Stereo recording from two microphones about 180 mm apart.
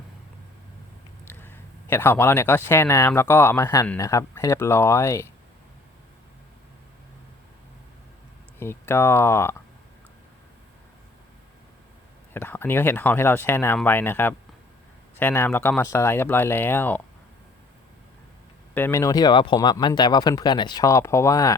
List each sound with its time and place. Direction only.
1.3 s speech: 10° left (ahead or behind)
8.5 s speech: 15° left (ahead or behind)
12.3 s speech: 10° left (ahead or behind)
18.7 s speech: 15° left (ahead or behind)